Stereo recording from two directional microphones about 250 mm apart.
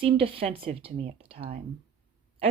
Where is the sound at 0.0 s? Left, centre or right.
Right.